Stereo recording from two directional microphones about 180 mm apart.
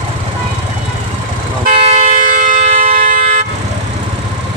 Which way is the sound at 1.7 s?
35° right (ahead or behind).